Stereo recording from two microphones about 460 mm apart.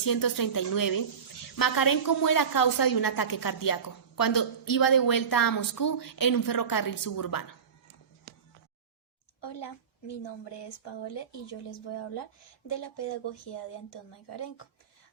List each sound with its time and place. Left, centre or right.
0.0 s a woman's voice: left
11.1 s speech: left
12.6 s speech: left